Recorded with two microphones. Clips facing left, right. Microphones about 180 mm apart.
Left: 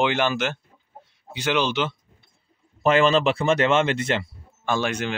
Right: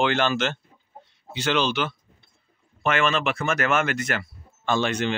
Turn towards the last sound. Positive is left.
turn(degrees=10)  # may be behind; listen again after turning